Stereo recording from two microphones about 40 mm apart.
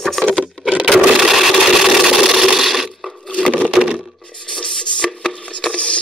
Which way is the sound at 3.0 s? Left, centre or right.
Centre.